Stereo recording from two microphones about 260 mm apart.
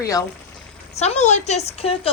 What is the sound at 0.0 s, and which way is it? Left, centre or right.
Speech, centre.